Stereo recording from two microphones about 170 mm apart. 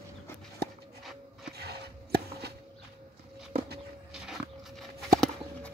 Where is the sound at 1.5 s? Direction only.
70° right (ahead or behind).